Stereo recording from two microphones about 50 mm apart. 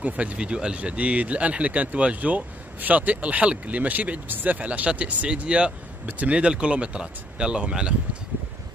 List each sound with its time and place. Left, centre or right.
0.0 s speech: right